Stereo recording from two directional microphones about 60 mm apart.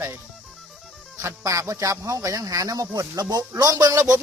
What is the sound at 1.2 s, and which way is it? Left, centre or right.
Speech, right.